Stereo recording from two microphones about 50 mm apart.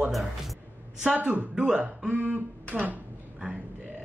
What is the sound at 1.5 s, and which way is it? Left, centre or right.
Speech, centre.